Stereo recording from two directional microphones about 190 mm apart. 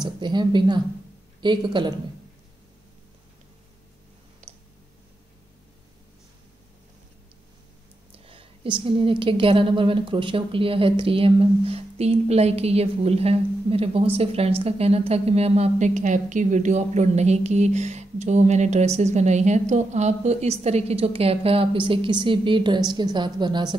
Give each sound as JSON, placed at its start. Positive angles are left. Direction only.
{"t": 0.0, "sound": "a woman's voice", "side_deg": -25}
{"t": 4.4, "sound": "a sound", "side_deg": -35}
{"t": 8.3, "sound": "a woman's voice", "side_deg": -25}